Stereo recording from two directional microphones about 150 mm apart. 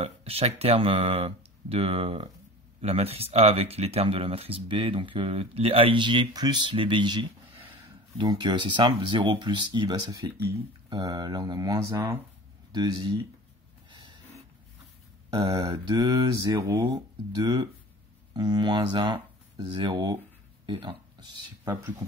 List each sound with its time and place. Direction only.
0.0 s speech: 40° right (ahead or behind); by 10.3 s 25° right (ahead or behind)
10.9 s mantra: 25° right (ahead or behind)
11.9 s speech: 15° right (ahead or behind)
12.7 s mantra: 25° right (ahead or behind)
13.8 s snort: 30° right (ahead or behind)
15.2 s speech: 25° right (ahead or behind)
15.6 s mantra: 35° right (ahead or behind)
18.3 s speech: 30° right (ahead or behind)
20.6 s a sound: 35° right (ahead or behind)